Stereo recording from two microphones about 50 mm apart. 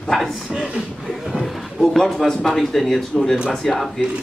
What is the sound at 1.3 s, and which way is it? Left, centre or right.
A man's voice, centre.